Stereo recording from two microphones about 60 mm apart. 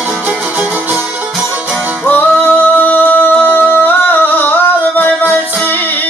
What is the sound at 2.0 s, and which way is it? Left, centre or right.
Singing, left.